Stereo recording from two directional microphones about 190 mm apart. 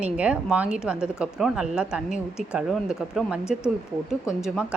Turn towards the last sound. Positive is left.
turn(degrees=0)  # may be behind; listen again after turning